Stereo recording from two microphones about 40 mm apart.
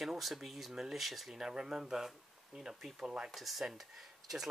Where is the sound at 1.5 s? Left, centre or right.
Centre.